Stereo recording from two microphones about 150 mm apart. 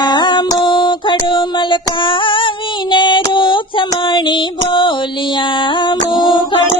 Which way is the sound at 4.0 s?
35° left (ahead or behind).